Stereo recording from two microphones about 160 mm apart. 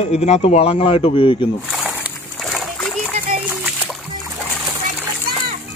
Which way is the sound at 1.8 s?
10° right (ahead or behind).